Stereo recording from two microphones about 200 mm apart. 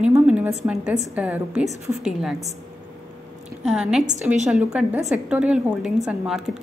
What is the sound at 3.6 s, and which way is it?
A woman's voice, 5° right (ahead or behind).